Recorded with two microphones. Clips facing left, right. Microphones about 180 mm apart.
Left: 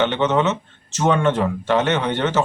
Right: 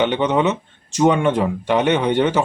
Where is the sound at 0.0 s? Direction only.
15° right (ahead or behind).